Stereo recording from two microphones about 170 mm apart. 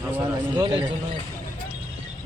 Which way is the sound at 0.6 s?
30° right (ahead or behind).